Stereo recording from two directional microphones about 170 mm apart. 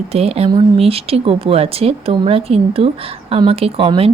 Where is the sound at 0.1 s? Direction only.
35° right (ahead or behind).